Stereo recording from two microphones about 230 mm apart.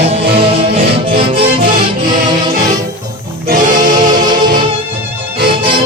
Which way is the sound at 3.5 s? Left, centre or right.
Right.